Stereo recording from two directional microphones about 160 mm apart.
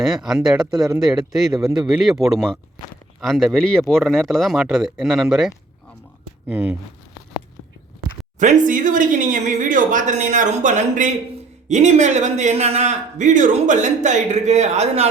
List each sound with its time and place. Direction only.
0.0 s speech: centre (ahead or behind)
1.9 s speech: centre (ahead or behind)
6.5 s speech: 15° right (ahead or behind)
8.4 s speech: 55° right (ahead or behind)